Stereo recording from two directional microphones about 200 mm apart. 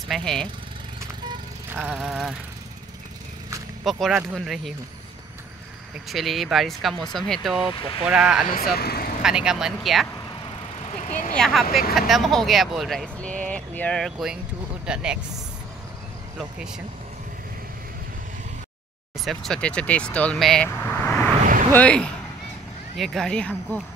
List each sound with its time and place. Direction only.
0.1 s speech: 5° left (ahead or behind)
1.8 s speech: centre (ahead or behind)
3.8 s speech: centre (ahead or behind)
6.0 s speech: centre (ahead or behind)
8.7 s speech: 50° left (ahead or behind)
9.2 s speech: 5° right (ahead or behind)
11.1 s speech: 40° left (ahead or behind)
11.3 s speech: centre (ahead or behind)
16.5 s speech: 5° right (ahead or behind)
19.2 s speech: centre (ahead or behind)